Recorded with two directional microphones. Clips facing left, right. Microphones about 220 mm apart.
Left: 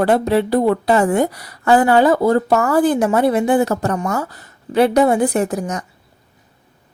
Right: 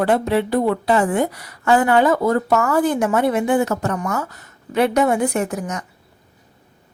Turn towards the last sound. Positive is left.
turn(degrees=35)  # may be behind; listen again after turning